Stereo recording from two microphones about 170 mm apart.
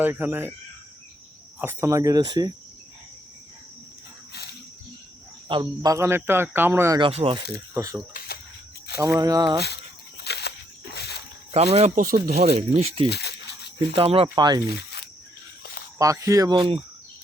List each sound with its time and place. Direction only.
0.0 s speech: 10° right (ahead or behind)
1.5 s speech: 15° right (ahead or behind)
5.5 s speech: 25° right (ahead or behind)
7.0 s speech: 35° right (ahead or behind)
7.5 s speech: 20° right (ahead or behind)
9.0 s speech: 20° right (ahead or behind)
10.2 s a sound: 70° left (ahead or behind)
11.5 s speech: 35° right (ahead or behind)
12.2 s speech: 65° right (ahead or behind)
12.5 s speech: 40° right (ahead or behind)
13.1 s a sound: 75° left (ahead or behind)
13.7 s speech: 35° right (ahead or behind)
14.7 s a sound: 70° left (ahead or behind)
16.0 s speech: 20° right (ahead or behind)